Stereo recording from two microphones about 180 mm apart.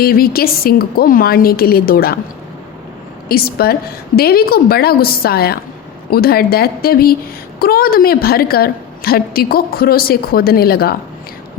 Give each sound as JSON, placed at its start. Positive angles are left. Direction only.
{"t": 0.0, "sound": "a woman's voice", "side_deg": 55}
{"t": 3.2, "sound": "a woman's voice", "side_deg": 55}